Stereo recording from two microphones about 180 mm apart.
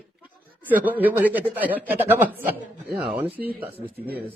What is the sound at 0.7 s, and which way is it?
A man's voice, 10° right (ahead or behind).